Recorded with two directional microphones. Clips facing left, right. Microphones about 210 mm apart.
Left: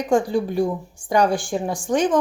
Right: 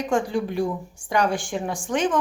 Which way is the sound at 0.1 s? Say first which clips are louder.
Left 5 dB; 35° left (ahead or behind).